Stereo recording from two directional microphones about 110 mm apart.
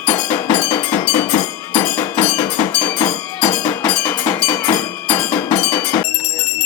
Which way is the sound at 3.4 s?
35° left (ahead or behind).